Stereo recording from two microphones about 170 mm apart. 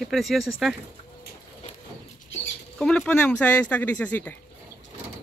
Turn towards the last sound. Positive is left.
turn(degrees=10)  # may be behind; listen again after turning